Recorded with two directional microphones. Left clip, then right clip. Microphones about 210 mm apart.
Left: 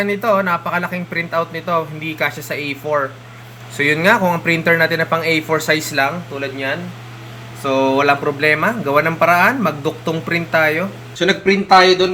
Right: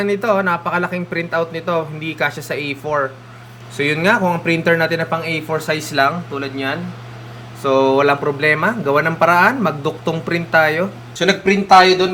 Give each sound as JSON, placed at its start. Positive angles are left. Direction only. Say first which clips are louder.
{"t": 0.0, "sound": "speech", "louder": "even", "side_deg": -5}
{"t": 7.6, "sound": "speech", "louder": "right 1 dB", "side_deg": -5}
{"t": 11.2, "sound": "a man's voice", "louder": "even", "side_deg": -25}